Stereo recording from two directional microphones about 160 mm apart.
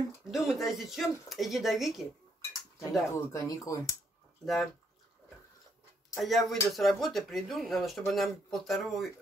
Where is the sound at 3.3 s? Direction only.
20° left (ahead or behind).